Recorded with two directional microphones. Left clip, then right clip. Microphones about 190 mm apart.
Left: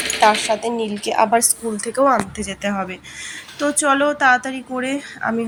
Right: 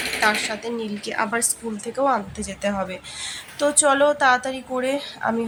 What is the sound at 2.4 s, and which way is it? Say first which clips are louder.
A woman's voice: left 2 dB; 15° left (ahead or behind).